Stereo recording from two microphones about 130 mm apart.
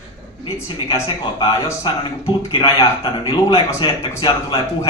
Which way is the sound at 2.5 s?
40° left (ahead or behind).